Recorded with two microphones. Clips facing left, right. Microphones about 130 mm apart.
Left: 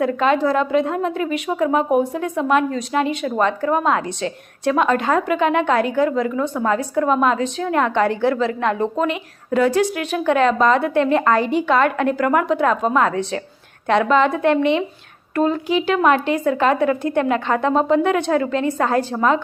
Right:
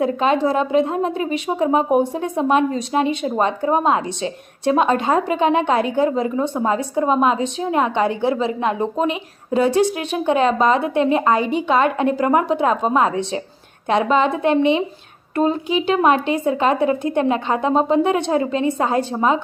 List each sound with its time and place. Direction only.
0.0 s a woman's voice: 20° right (ahead or behind)